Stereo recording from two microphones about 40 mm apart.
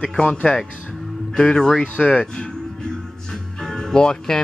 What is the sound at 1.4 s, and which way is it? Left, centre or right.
Speech, centre.